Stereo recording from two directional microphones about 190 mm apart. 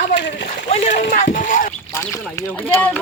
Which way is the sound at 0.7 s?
40° left (ahead or behind).